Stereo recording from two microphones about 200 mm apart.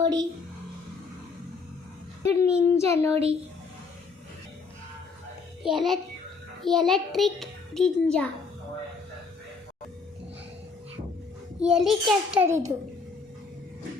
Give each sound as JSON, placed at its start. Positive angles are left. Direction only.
{"t": 0.0, "sound": "speech", "side_deg": -20}
{"t": 2.2, "sound": "a child's voice", "side_deg": 15}
{"t": 5.6, "sound": "a child's voice", "side_deg": 0}
{"t": 11.6, "sound": "a child's voice", "side_deg": 0}